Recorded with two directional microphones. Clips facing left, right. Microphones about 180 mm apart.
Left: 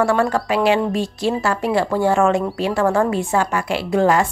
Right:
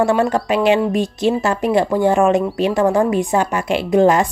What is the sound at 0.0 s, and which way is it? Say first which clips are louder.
A woman's voice: right 2 dB; 20° right (ahead or behind).